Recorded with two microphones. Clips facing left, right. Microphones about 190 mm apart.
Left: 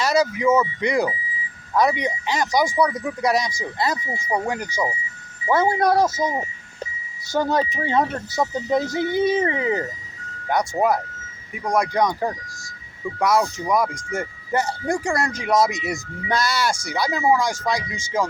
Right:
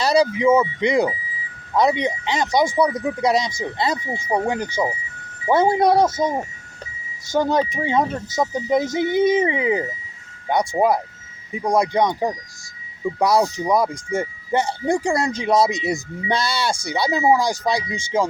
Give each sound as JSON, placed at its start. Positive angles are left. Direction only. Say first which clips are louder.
{"t": 0.0, "sound": "speech", "louder": "right 3 dB", "side_deg": -30}
{"t": 7.3, "sound": "speech", "louder": "right 2 dB", "side_deg": -15}
{"t": 13.2, "sound": "speech", "louder": "right 2 dB", "side_deg": -35}